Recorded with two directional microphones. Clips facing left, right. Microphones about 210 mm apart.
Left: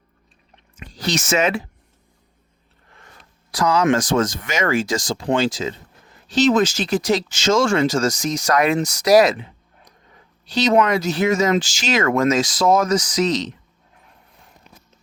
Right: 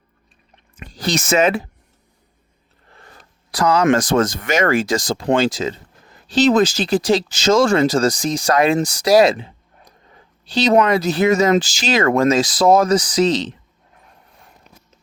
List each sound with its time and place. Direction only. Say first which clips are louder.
0.8 s a sound: right 2 dB; 50° right (ahead or behind)
1.3 s speech: right 4 dB; 35° right (ahead or behind)
3.5 s speech: right 2 dB; 60° right (ahead or behind)
6.2 s speech: right 2 dB; 35° right (ahead or behind)